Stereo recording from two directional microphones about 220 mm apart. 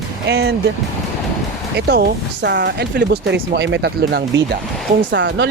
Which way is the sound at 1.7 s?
45° right (ahead or behind).